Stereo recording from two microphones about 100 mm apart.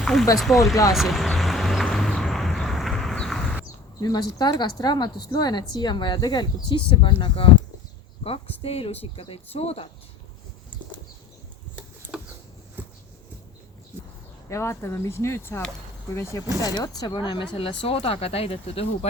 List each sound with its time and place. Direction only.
0.0 s speech: 5° left (ahead or behind)
0.9 s vehicle: centre (ahead or behind)
4.0 s speech: 40° left (ahead or behind); by 7.5 s 65° left (ahead or behind)
8.6 s speech: 85° left
14.5 s speech: 25° left (ahead or behind)
16.6 s speech: 40° left (ahead or behind); by 18.9 s 75° left (ahead or behind)